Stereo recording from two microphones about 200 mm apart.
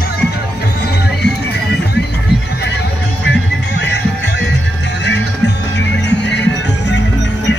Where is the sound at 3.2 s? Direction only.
60° left (ahead or behind).